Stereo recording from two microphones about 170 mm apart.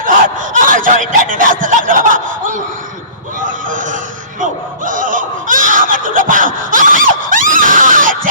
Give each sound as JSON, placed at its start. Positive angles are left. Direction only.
{"t": 0.0, "sound": "snicker", "side_deg": -50}
{"t": 3.4, "sound": "a sound", "side_deg": -50}
{"t": 4.9, "sound": "snicker", "side_deg": -50}